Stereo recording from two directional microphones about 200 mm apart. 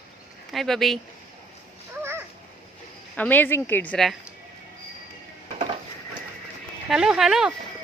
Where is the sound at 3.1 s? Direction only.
10° left (ahead or behind).